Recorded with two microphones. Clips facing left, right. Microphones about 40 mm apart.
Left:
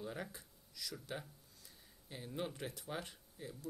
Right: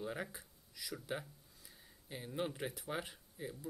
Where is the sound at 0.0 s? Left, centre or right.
Centre.